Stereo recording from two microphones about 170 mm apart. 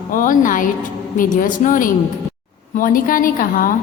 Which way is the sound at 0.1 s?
50° left (ahead or behind).